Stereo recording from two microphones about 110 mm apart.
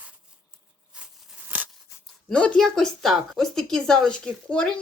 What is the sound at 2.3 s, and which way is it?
Speech, 10° left (ahead or behind).